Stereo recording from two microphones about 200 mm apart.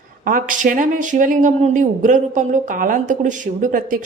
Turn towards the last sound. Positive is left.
turn(degrees=-40)  # may be behind; listen again after turning